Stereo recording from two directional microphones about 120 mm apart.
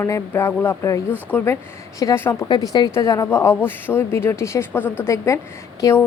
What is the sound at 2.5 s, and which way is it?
A woman's voice, 35° left (ahead or behind).